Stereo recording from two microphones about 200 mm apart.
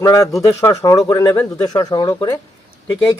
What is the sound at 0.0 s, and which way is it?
A man's voice, 15° left (ahead or behind).